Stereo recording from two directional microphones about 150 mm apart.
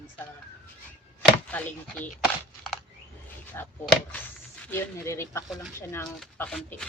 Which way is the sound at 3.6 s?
15° left (ahead or behind).